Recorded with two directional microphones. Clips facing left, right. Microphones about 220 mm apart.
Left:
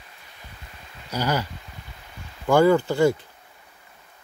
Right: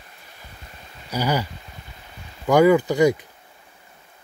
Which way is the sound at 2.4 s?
15° right (ahead or behind).